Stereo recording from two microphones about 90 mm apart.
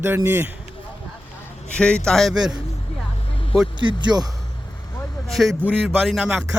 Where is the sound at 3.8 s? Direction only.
60° right (ahead or behind).